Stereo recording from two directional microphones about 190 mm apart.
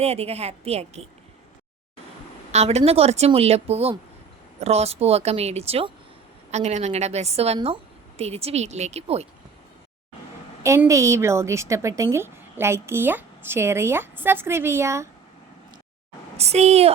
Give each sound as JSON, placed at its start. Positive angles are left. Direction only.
{"t": 0.0, "sound": "speech", "side_deg": -30}
{"t": 2.5, "sound": "speech", "side_deg": -35}
{"t": 10.6, "sound": "a woman's voice", "side_deg": -15}
{"t": 16.4, "sound": "speech", "side_deg": -35}